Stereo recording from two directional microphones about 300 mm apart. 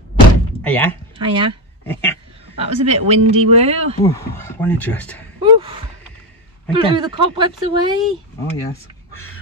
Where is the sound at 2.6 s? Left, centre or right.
Right.